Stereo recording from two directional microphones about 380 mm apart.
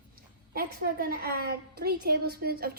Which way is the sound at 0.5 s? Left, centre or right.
Right.